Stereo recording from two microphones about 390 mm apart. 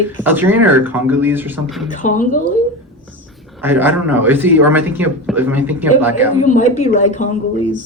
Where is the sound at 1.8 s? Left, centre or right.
Centre.